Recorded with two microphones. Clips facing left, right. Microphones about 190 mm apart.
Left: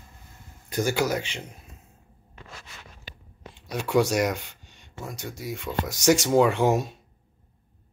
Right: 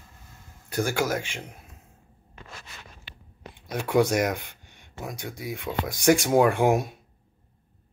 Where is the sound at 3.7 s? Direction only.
55° right (ahead or behind).